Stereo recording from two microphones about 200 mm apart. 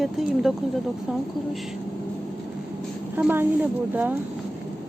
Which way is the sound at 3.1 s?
10° right (ahead or behind).